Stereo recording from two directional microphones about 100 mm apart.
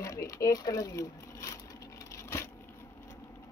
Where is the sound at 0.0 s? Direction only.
35° left (ahead or behind).